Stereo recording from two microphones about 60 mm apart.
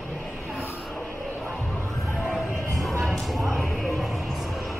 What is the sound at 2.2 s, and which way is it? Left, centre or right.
Music, centre.